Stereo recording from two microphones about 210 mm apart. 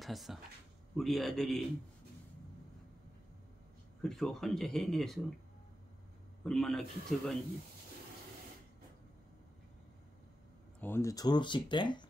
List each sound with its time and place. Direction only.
0.0 s speech: centre (ahead or behind)
4.0 s speech: centre (ahead or behind)
6.4 s speech: centre (ahead or behind)
10.8 s speech: 10° left (ahead or behind)